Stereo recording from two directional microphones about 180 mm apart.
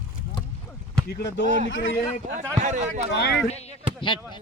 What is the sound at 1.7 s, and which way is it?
Speech, 90° left.